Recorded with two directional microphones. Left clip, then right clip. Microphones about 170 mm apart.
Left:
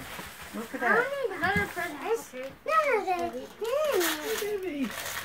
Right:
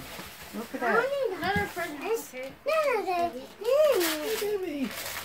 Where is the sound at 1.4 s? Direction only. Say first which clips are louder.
Left 1 dB; 5° right (ahead or behind).